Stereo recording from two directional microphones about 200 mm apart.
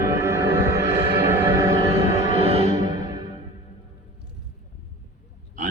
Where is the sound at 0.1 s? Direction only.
15° right (ahead or behind).